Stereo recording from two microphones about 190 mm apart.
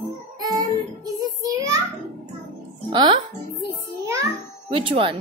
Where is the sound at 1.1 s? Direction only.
20° right (ahead or behind).